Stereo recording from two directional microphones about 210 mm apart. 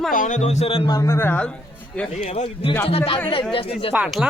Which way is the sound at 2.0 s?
30° left (ahead or behind).